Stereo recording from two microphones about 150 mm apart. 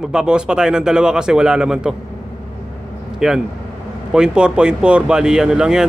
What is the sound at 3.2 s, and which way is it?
Speech, 5° right (ahead or behind).